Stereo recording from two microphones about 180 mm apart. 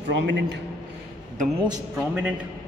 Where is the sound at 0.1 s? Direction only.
75° right (ahead or behind).